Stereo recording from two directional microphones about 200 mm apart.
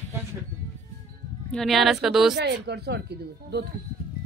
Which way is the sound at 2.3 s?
55° right (ahead or behind).